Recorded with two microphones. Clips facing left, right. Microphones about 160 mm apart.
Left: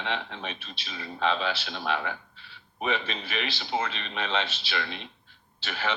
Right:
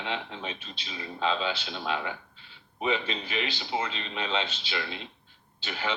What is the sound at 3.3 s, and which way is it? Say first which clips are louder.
Speech: left 1 dB; 20° right (ahead or behind).